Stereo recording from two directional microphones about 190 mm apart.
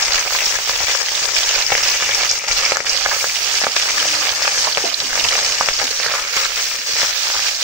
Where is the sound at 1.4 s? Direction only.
5° right (ahead or behind).